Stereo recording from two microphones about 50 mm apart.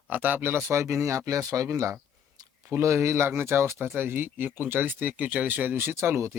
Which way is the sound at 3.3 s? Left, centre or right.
Right.